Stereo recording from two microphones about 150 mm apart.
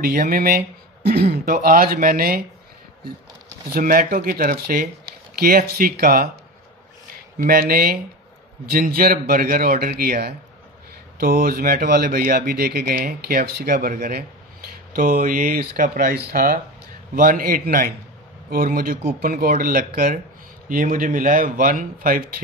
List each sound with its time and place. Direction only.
0.0 s speech: 75° right (ahead or behind)
1.0 s speech: 90° right; by 2.4 s 75° right (ahead or behind)
3.7 s a man's voice: 70° right (ahead or behind)
7.3 s a man's voice: 80° right
20.6 s speech: 65° right (ahead or behind)